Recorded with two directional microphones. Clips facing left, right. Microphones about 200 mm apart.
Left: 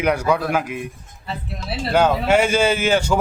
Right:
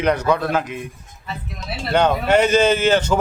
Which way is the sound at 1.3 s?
30° left (ahead or behind).